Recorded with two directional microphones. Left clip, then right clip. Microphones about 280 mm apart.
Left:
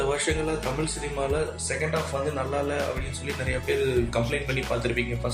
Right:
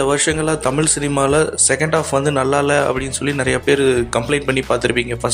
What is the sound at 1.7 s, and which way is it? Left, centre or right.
Speech, right.